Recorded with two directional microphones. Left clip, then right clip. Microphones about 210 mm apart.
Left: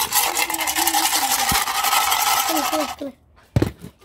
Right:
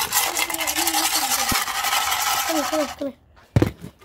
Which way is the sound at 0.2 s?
30° left (ahead or behind).